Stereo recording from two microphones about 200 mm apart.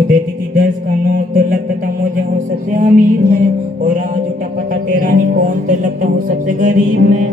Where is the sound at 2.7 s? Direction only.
40° right (ahead or behind).